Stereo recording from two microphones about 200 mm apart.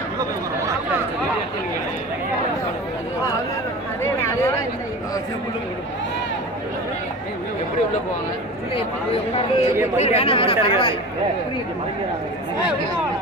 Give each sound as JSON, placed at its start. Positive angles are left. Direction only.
{"t": 8.7, "sound": "speech", "side_deg": 30}